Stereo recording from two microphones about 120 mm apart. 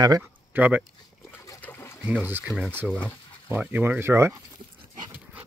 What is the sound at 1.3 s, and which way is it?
Splash, 15° left (ahead or behind).